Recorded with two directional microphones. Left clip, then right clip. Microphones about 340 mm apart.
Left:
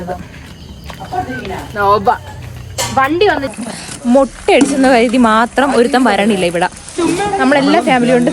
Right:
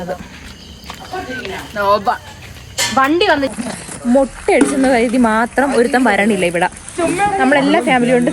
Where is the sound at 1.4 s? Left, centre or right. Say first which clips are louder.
Left 3 dB; centre.